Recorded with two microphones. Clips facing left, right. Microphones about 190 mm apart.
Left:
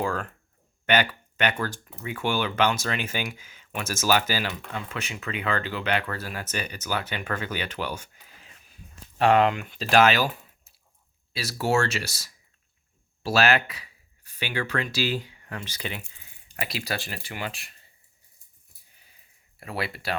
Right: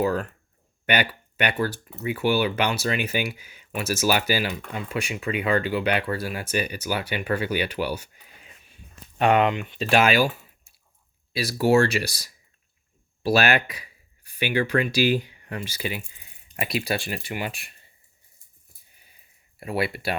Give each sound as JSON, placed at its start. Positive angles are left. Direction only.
{"t": 0.9, "sound": "speech", "side_deg": -10}
{"t": 9.1, "sound": "speech", "side_deg": 40}
{"t": 10.0, "sound": "speech", "side_deg": -10}
{"t": 17.1, "sound": "speech", "side_deg": -15}
{"t": 19.5, "sound": "speech", "side_deg": -15}